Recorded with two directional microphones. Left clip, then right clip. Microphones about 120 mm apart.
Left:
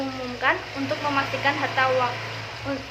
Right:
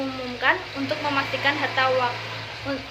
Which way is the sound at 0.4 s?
15° right (ahead or behind).